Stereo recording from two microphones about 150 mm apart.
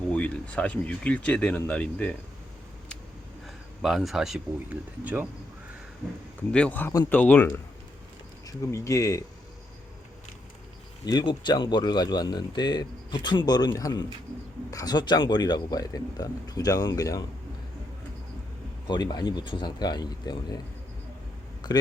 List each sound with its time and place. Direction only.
0.1 s speech: 10° left (ahead or behind)
3.4 s speech: centre (ahead or behind)
6.5 s speech: 10° left (ahead or behind)
11.0 s speech: 30° left (ahead or behind)
18.9 s speech: 30° left (ahead or behind)
21.6 s a man's voice: 30° left (ahead or behind)